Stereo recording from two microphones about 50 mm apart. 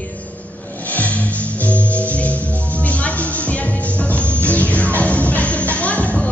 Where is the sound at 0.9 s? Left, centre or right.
Left.